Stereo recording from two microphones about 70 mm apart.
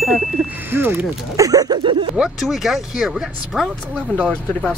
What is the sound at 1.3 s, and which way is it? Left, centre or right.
Speech, right.